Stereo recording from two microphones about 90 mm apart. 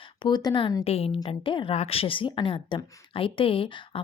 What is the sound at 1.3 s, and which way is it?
A woman's voice, 80° left.